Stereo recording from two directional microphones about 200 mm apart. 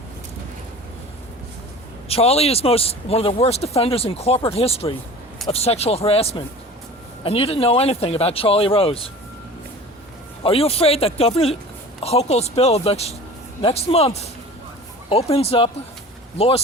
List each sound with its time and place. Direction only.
2.0 s speech: 30° left (ahead or behind)
10.4 s speech: 30° left (ahead or behind)